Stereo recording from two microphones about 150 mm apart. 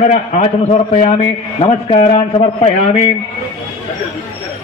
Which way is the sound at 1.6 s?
40° left (ahead or behind).